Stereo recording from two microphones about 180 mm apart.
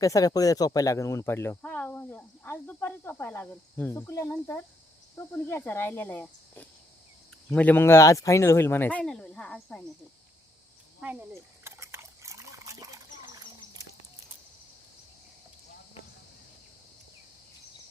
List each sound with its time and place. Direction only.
0.0 s speech: 20° left (ahead or behind)
11.0 s trickle: 10° right (ahead or behind)